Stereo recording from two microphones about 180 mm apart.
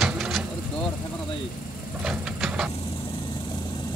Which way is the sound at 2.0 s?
5° right (ahead or behind).